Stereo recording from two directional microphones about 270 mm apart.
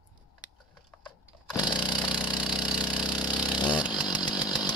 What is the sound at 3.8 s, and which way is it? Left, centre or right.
Chainsaw, centre.